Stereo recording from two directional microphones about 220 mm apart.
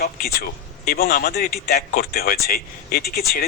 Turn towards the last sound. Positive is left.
turn(degrees=45)  # may be behind; listen again after turning